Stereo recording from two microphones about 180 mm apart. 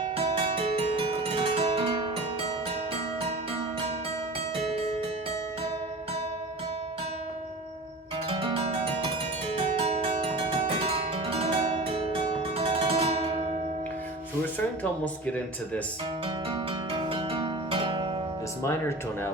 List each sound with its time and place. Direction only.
0.0 s music: 30° right (ahead or behind)
8.3 s music: 30° right (ahead or behind)
15.0 s speech: 10° left (ahead or behind)
16.2 s music: 30° right (ahead or behind)
18.6 s speech: 15° left (ahead or behind)